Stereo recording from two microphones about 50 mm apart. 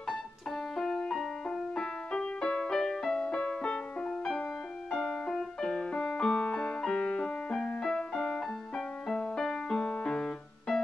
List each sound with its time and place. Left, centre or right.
0.1 s music: centre
7.8 s music: centre